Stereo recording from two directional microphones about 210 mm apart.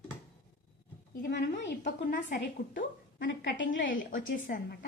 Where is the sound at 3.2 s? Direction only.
60° left (ahead or behind).